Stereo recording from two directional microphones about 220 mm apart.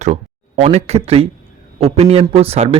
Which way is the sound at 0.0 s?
30° right (ahead or behind).